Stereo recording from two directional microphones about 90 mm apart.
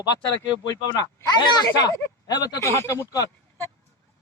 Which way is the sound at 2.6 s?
30° left (ahead or behind).